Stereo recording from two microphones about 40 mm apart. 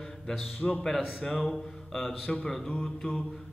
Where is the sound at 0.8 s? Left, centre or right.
Centre.